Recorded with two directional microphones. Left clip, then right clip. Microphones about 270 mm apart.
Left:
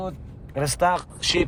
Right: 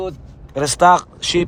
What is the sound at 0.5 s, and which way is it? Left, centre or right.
Speech, right.